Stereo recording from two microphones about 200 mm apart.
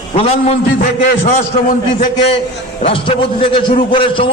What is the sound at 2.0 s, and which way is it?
A man's voice, 35° left (ahead or behind).